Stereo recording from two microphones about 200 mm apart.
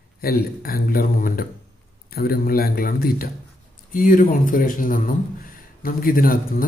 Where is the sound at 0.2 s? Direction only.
50° left (ahead or behind).